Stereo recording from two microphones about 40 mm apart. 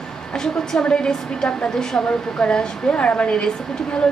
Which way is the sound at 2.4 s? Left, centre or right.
Left.